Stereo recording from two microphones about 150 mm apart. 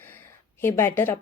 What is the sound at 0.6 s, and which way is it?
Speech, 15° left (ahead or behind).